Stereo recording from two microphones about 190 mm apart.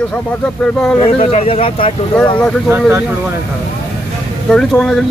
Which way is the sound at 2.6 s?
10° right (ahead or behind).